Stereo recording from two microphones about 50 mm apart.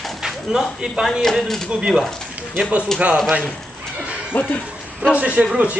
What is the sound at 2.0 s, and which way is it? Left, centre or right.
Speech, centre.